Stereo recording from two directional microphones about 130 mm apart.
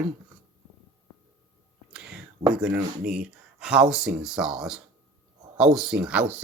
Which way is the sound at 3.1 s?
5° right (ahead or behind).